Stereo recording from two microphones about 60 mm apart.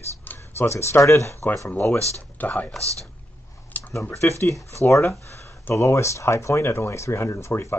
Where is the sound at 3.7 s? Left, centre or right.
Left.